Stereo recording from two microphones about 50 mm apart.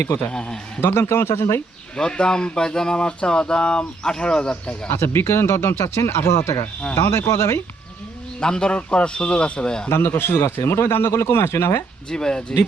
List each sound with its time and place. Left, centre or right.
0.3 s speech: centre
0.8 s speech: left
2.0 s speech: centre
4.9 s a man's voice: left
8.4 s a man's voice: centre
9.9 s a man's voice: left
12.1 s speech: centre